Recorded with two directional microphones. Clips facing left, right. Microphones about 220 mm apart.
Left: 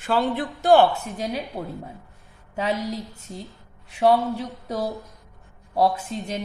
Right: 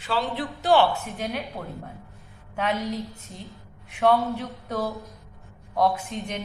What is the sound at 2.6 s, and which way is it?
A woman's voice, 35° left (ahead or behind).